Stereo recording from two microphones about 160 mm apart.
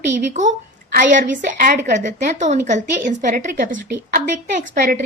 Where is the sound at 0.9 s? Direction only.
55° right (ahead or behind).